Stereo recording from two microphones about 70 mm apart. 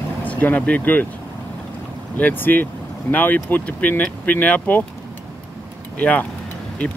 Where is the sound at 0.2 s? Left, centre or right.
Left.